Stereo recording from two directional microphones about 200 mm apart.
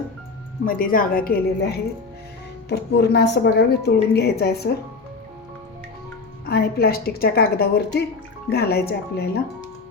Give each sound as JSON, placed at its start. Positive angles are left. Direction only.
{"t": 0.6, "sound": "a woman's voice", "side_deg": 45}
{"t": 6.4, "sound": "a woman's voice", "side_deg": 50}